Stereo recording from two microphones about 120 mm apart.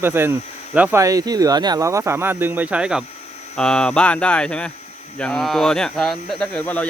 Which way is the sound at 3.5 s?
5° left (ahead or behind).